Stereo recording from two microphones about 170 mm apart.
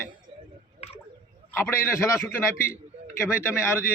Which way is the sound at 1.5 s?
15° left (ahead or behind).